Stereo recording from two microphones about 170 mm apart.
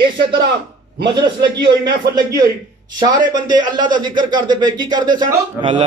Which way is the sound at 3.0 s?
25° right (ahead or behind).